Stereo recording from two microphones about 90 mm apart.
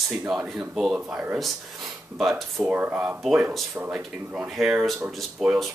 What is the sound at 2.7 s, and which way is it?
Speech, 20° right (ahead or behind).